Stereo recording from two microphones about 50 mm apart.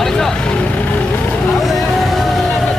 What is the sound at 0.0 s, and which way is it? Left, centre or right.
Vehicle, centre.